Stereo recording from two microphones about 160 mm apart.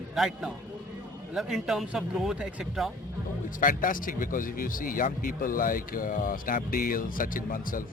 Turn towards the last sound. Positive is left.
turn(degrees=60)  # may be behind; listen again after turning